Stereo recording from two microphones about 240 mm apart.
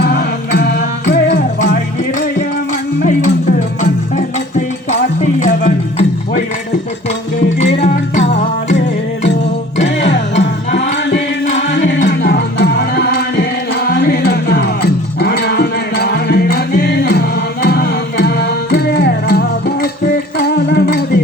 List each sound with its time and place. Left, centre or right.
0.0 s music: left
5.4 s music: left
7.7 s music: left
10.0 s music: left
10.9 s music: left
11.4 s music: left
12.0 s music: left